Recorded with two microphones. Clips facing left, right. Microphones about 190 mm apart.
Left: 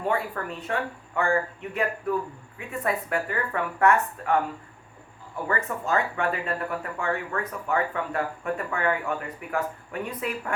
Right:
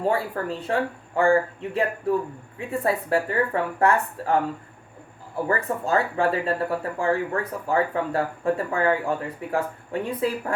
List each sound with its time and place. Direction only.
0.0 s speech: 30° right (ahead or behind)
5.5 s speech: 30° right (ahead or behind)